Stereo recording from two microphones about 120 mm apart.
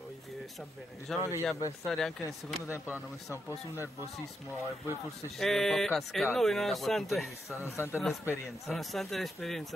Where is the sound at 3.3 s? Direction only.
25° left (ahead or behind).